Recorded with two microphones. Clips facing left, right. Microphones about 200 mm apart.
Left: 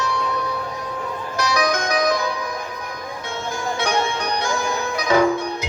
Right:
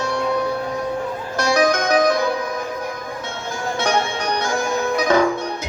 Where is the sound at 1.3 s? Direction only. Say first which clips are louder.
Right 4 dB; 50° right (ahead or behind).